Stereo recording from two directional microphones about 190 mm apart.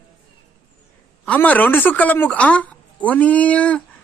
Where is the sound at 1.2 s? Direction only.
10° left (ahead or behind).